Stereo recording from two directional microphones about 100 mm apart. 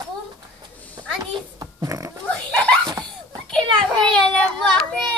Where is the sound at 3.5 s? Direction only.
10° left (ahead or behind).